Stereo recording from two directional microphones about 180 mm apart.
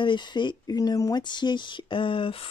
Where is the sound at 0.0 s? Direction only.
25° left (ahead or behind).